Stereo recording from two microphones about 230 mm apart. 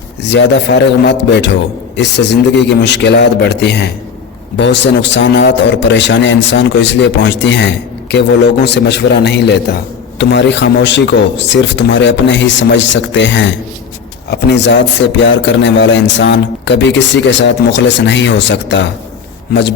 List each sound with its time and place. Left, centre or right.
0.2 s a man's voice: left